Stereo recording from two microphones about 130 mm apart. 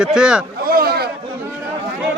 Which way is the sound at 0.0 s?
5° right (ahead or behind).